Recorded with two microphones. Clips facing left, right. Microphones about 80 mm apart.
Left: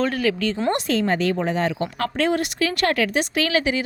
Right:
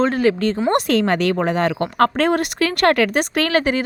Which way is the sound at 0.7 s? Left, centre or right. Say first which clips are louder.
Right 4 dB; right.